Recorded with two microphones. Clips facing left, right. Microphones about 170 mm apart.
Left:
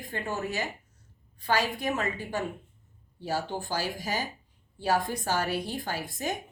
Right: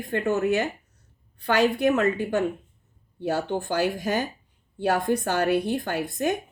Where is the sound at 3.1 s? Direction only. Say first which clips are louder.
Right 6 dB; 65° right (ahead or behind).